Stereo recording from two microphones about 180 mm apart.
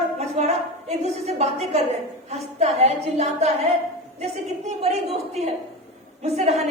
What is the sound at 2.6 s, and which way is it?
A woman's voice, 35° right (ahead or behind).